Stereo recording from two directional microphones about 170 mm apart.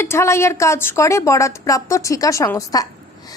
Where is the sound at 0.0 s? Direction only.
15° left (ahead or behind).